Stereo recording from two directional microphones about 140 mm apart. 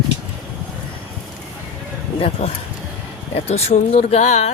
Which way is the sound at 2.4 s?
50° left (ahead or behind).